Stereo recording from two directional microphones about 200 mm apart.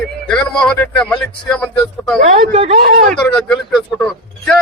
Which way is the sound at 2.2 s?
35° right (ahead or behind).